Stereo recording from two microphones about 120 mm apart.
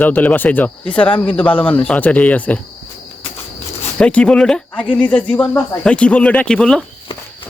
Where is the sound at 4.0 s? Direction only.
10° left (ahead or behind).